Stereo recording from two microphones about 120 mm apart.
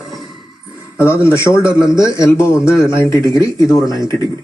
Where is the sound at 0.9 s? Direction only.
25° left (ahead or behind).